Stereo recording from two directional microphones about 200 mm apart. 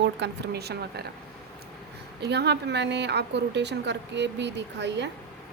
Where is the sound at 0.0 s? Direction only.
60° right (ahead or behind).